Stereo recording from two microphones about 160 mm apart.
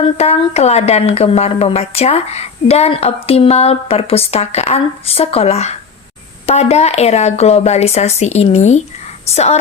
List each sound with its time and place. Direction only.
0.0 s speech: 40° left (ahead or behind)